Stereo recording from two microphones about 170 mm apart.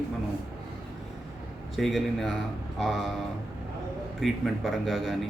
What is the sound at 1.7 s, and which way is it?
Speech, centre (ahead or behind).